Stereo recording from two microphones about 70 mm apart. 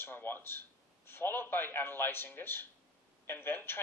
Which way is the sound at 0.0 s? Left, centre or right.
Left.